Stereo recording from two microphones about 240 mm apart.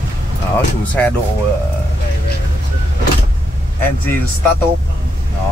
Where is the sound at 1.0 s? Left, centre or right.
Centre.